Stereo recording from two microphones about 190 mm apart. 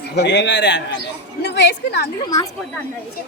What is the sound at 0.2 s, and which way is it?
A woman's voice, 65° left (ahead or behind).